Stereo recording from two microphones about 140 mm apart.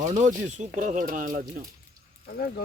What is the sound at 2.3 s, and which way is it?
Speech, 90° left.